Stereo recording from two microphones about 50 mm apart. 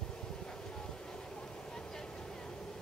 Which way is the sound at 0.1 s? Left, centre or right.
Centre.